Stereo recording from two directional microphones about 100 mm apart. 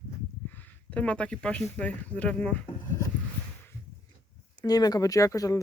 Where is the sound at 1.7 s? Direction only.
15° left (ahead or behind).